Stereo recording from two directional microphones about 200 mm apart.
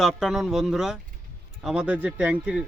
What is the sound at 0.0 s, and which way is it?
A man's voice, centre (ahead or behind).